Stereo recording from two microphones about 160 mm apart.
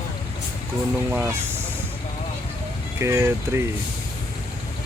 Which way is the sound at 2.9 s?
15° right (ahead or behind).